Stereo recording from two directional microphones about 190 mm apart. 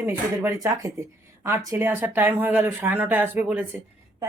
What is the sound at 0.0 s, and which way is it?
Speech, 15° right (ahead or behind).